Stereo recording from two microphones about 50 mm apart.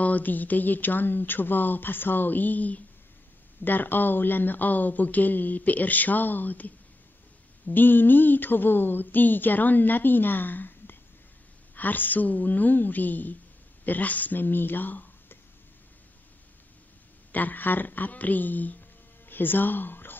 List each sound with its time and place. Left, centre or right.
0.0 s speech: left
7.7 s speech: left
17.3 s speech: left